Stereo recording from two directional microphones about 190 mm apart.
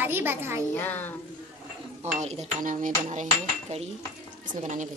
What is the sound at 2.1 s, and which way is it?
Cutlery, 35° right (ahead or behind).